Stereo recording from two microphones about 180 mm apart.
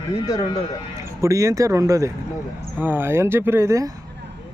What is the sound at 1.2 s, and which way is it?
Speech, 15° right (ahead or behind).